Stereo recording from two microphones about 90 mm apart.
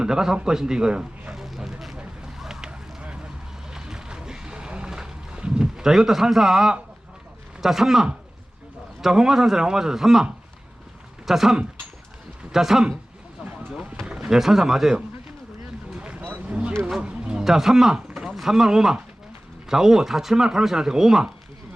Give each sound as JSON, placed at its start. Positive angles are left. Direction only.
{"t": 0.0, "sound": "a sound", "side_deg": -5}
{"t": 3.7, "sound": "boat", "side_deg": -5}
{"t": 7.6, "sound": "speech", "side_deg": -5}
{"t": 13.4, "sound": "vehicle", "side_deg": -15}
{"t": 14.0, "sound": "speech", "side_deg": -10}
{"t": 15.9, "sound": "vehicle", "side_deg": -10}
{"t": 16.8, "sound": "speech", "side_deg": -10}